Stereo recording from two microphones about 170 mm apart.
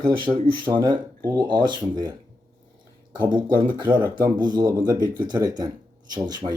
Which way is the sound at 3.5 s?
25° right (ahead or behind).